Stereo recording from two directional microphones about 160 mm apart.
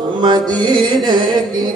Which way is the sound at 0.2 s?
25° right (ahead or behind).